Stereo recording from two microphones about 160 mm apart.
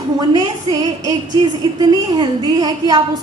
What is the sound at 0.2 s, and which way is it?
A woman's voice, 25° right (ahead or behind).